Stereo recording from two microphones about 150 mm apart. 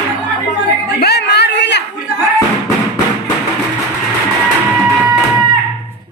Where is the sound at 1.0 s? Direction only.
90° left.